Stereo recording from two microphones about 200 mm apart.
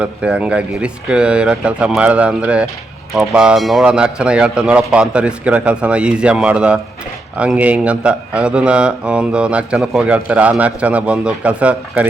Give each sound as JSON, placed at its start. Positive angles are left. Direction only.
{"t": 0.0, "sound": "a man's voice", "side_deg": -5}